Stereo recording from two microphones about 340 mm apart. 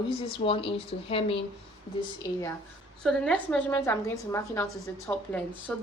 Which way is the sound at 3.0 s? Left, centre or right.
Centre.